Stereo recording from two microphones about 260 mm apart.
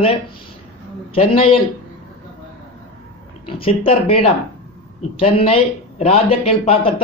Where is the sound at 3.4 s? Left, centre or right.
Left.